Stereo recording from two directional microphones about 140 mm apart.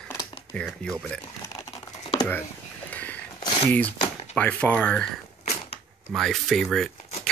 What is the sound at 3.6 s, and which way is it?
Speech, 10° left (ahead or behind).